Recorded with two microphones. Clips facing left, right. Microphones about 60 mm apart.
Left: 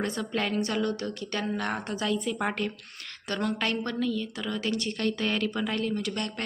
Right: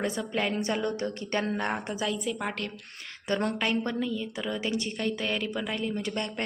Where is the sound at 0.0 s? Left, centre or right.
Centre.